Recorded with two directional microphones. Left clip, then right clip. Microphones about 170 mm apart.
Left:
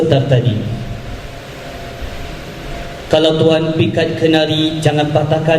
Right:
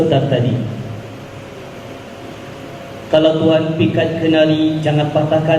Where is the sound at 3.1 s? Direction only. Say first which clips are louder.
Left 1 dB; 45° left (ahead or behind).